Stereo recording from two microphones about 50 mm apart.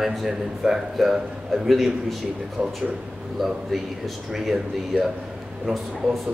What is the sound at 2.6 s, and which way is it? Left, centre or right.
Speech, right.